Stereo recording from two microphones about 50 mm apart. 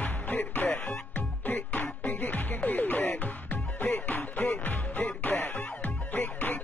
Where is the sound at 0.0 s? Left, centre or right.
Left.